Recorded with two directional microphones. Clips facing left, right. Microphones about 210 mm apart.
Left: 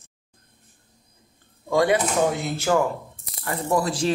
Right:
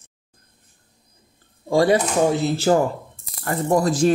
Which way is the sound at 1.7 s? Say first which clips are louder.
Right 3 dB; 35° right (ahead or behind).